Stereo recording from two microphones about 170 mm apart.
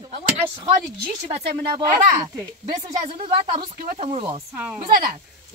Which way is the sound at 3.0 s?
35° right (ahead or behind).